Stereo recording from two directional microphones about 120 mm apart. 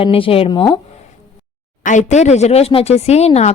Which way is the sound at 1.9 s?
80° left.